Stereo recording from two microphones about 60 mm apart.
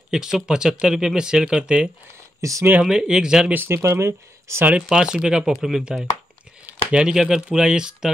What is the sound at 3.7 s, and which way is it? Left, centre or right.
Speech, right.